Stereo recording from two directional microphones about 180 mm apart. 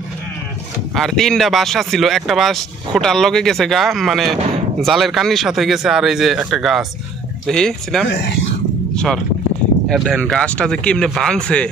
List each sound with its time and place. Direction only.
0.9 s speech: centre (ahead or behind)
8.1 s speech: 75° left (ahead or behind)
8.9 s speech: 5° left (ahead or behind)